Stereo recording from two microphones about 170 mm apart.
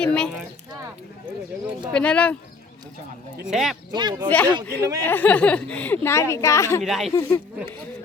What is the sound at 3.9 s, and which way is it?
Speech, 25° right (ahead or behind).